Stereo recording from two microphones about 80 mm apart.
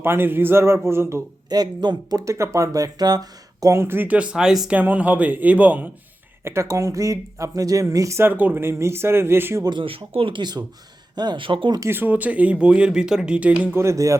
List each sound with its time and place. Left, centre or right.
0.0 s speech: right
1.5 s speech: right
3.8 s speech: right; by 4.8 s centre
4.8 s speech: centre
6.4 s speech: right
8.2 s speech: right
8.6 s speech: right
10.2 s speech: right
11.1 s speech: right
11.9 s speech: right
13.7 s speech: right